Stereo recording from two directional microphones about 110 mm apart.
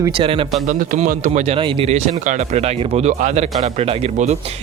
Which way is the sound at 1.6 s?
50° right (ahead or behind).